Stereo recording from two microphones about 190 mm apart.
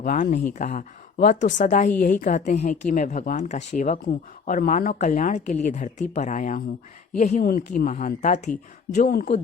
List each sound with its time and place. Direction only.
0.0 s a woman's voice: 45° left (ahead or behind)
4.0 s a woman's voice: 45° left (ahead or behind)